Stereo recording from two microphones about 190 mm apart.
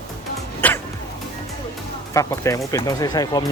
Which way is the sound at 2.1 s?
15° left (ahead or behind).